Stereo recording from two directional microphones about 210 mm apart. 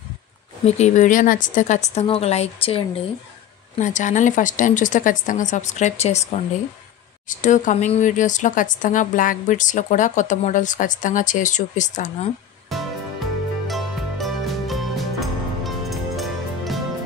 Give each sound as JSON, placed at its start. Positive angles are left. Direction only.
{"t": 0.7, "sound": "speech", "side_deg": 30}
{"t": 12.7, "sound": "music", "side_deg": 0}